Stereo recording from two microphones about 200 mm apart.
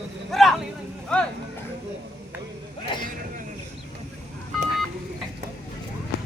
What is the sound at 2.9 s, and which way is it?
Vehicle, 25° left (ahead or behind).